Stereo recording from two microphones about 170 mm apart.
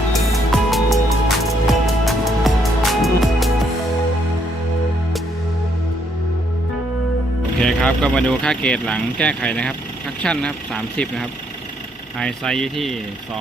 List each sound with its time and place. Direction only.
0.5 s music: centre (ahead or behind)
7.6 s speech: 5° left (ahead or behind)